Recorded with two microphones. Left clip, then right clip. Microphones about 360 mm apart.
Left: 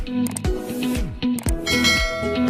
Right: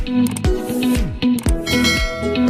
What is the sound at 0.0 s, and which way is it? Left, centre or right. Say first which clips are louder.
Music: right 6 dB; right.